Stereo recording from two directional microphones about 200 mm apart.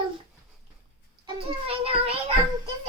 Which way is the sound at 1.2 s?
30° right (ahead or behind).